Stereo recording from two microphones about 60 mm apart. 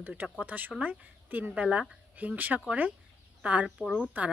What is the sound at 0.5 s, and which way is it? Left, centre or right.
Speech, right.